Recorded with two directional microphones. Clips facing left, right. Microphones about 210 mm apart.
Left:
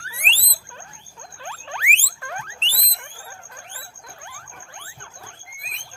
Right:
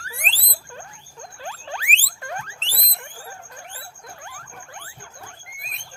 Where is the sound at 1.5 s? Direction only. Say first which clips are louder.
Right 1 dB; 35° right (ahead or behind).